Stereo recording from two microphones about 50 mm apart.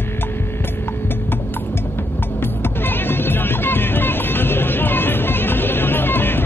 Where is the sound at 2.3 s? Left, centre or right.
Left.